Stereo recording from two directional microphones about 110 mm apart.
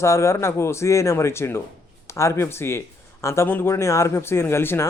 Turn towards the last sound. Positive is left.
turn(degrees=20)  # may be behind; listen again after turning